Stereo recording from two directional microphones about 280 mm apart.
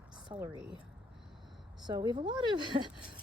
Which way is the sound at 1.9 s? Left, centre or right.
Centre.